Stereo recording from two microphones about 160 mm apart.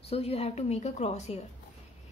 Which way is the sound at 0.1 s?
40° left (ahead or behind).